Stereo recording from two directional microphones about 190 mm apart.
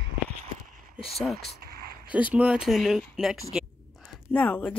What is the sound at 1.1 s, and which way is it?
A woman's voice, centre (ahead or behind).